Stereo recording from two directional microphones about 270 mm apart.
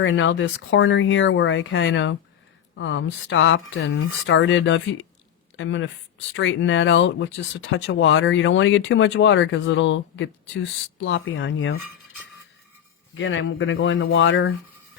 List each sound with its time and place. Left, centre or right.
0.0 s speech: left
13.1 s speech: left